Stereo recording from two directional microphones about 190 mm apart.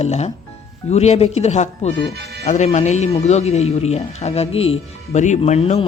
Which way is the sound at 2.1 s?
60° right (ahead or behind).